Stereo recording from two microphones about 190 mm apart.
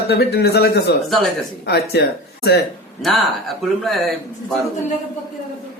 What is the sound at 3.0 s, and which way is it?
Speech, centre (ahead or behind).